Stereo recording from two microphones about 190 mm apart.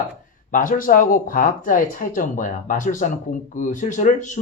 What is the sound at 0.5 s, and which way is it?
Speech, 45° left (ahead or behind).